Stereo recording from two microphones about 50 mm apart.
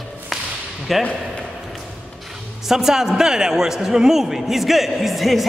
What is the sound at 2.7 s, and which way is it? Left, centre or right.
A man's voice, centre.